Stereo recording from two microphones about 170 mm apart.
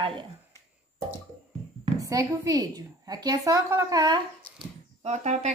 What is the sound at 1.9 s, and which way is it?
A woman's voice, 20° right (ahead or behind).